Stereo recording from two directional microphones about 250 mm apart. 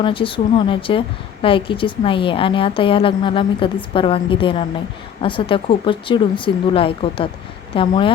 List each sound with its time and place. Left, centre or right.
0.0 s a woman's voice: left